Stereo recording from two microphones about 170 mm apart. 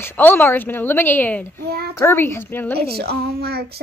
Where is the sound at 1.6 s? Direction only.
70° right (ahead or behind).